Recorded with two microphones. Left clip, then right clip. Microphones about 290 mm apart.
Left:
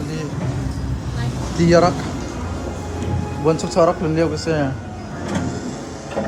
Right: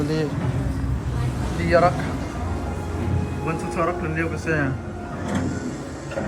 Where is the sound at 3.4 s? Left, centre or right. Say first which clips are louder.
Left 9 dB; centre.